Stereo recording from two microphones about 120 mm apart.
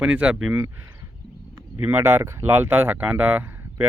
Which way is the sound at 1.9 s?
25° right (ahead or behind).